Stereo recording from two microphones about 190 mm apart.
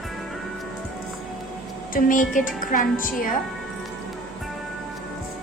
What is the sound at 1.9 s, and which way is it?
Speech, 45° left (ahead or behind).